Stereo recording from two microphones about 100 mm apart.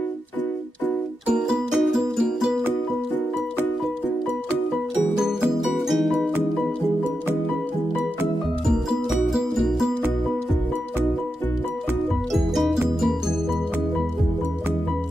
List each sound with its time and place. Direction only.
1.2 s music: 5° right (ahead or behind)
5.9 s music: centre (ahead or behind)
8.6 s music: centre (ahead or behind)
12.3 s music: centre (ahead or behind)